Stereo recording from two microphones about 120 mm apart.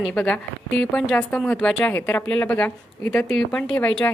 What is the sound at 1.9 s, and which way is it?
Speech, 20° left (ahead or behind).